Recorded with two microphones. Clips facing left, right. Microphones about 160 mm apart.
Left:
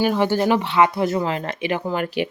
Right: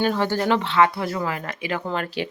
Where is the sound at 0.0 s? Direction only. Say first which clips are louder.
Left 3 dB; 15° left (ahead or behind).